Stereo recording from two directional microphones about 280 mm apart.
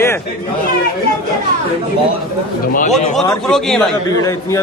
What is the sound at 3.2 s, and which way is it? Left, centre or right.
A man's voice, centre.